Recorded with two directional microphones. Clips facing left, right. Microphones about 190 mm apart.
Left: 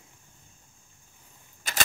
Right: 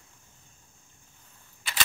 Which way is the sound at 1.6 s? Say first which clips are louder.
Left 3 dB; 45° left (ahead or behind).